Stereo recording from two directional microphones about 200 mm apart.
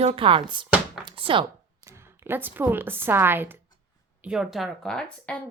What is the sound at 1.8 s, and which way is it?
A woman's voice, 15° right (ahead or behind).